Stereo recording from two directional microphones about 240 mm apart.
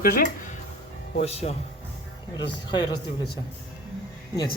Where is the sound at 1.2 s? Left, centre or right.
Left.